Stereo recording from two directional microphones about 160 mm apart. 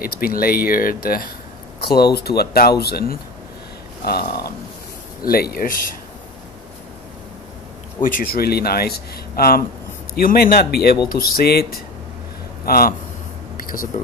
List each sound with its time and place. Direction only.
0.0 s speech: 65° left (ahead or behind)
2.1 s speech: 80° left
8.0 s speech: 65° left (ahead or behind)
12.6 s speech: 65° left (ahead or behind)
13.6 s a sound: 60° left (ahead or behind)